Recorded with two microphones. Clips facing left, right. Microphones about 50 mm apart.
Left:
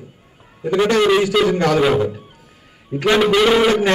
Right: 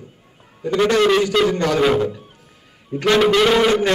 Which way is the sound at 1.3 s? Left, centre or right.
Centre.